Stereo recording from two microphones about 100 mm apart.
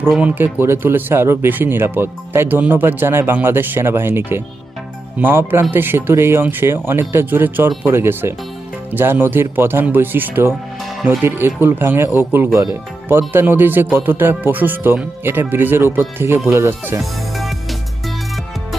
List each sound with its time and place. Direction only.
0.2 s speech: 20° right (ahead or behind)
17.0 s music: centre (ahead or behind)